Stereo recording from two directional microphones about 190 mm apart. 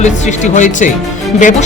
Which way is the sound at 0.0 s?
40° left (ahead or behind).